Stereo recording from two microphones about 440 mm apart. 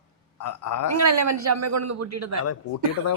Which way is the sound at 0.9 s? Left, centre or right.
Right.